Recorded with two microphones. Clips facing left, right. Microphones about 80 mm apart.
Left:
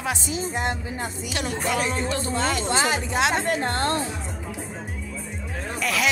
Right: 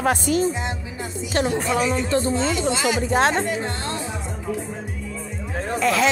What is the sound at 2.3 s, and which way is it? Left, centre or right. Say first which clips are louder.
Speech: right 1 dB; left.